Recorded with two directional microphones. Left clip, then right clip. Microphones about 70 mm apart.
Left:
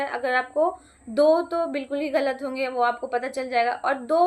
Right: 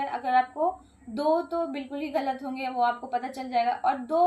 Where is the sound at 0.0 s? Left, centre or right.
Left.